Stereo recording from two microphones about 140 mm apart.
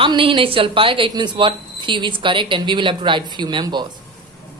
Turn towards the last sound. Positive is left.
turn(degrees=-35)  # may be behind; listen again after turning